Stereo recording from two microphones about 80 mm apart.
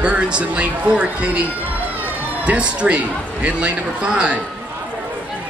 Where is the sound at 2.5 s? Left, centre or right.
Centre.